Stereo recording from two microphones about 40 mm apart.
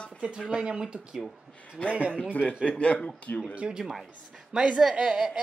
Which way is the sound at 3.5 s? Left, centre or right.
Right.